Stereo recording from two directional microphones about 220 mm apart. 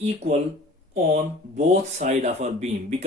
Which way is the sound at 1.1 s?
30° right (ahead or behind).